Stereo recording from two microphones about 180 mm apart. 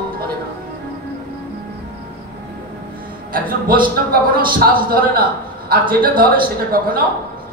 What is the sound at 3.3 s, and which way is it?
A man's voice, 55° right (ahead or behind).